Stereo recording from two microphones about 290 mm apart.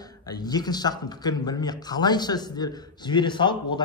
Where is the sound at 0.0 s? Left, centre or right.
Centre.